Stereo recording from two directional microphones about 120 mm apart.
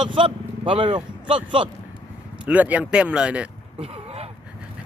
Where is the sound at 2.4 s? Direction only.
10° right (ahead or behind).